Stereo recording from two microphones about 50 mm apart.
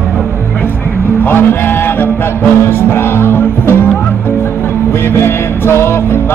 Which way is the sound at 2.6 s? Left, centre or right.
Left.